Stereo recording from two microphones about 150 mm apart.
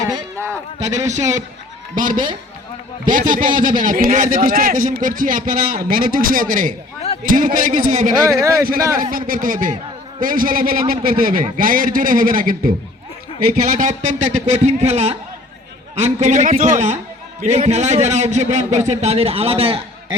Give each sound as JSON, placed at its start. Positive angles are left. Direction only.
{"t": 0.0, "sound": "a sound", "side_deg": -25}
{"t": 2.0, "sound": "a man's voice", "side_deg": -65}
{"t": 8.1, "sound": "speech", "side_deg": -20}
{"t": 9.0, "sound": "a man's voice", "side_deg": -70}
{"t": 13.5, "sound": "a man's voice", "side_deg": -60}